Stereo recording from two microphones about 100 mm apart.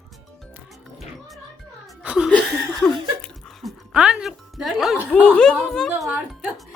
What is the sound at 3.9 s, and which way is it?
Speech, 10° right (ahead or behind).